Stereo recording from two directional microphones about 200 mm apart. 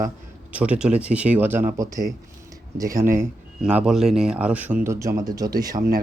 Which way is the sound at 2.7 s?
15° right (ahead or behind).